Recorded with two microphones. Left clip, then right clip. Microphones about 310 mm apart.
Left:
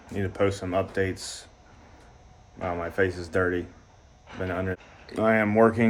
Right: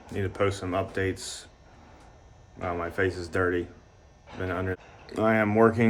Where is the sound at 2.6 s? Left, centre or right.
Centre.